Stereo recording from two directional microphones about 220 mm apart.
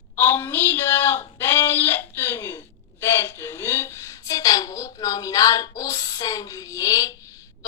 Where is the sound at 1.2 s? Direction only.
10° left (ahead or behind).